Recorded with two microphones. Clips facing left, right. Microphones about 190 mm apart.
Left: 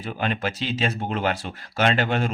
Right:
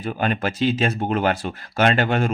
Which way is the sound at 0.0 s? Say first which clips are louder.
Right 3 dB; 50° right (ahead or behind).